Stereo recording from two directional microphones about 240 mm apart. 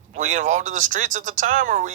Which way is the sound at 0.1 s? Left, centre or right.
Right.